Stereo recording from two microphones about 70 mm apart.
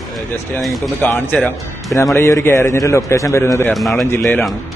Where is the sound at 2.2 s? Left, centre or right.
Left.